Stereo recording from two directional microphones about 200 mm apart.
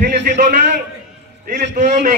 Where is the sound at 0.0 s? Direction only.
40° right (ahead or behind).